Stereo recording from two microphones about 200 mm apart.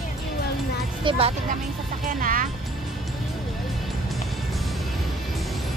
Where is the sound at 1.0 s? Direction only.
30° right (ahead or behind).